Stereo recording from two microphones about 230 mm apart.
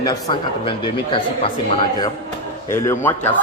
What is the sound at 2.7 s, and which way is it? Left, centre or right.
Speech, centre.